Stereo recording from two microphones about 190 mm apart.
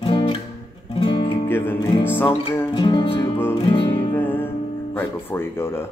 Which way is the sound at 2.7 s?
25° left (ahead or behind).